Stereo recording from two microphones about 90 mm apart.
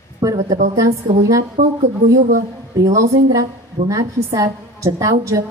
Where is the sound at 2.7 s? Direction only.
40° right (ahead or behind).